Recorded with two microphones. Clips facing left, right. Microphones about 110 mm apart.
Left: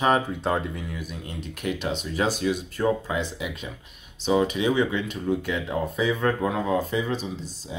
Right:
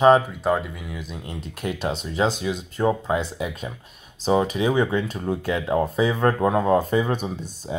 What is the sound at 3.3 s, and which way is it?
Speech, 35° right (ahead or behind).